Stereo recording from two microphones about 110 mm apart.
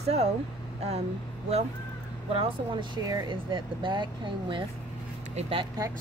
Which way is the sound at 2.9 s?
45° right (ahead or behind).